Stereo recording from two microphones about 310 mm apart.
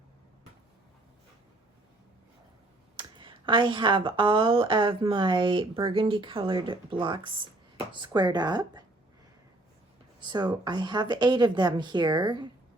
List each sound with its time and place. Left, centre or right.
2.9 s speech: centre
10.2 s speech: centre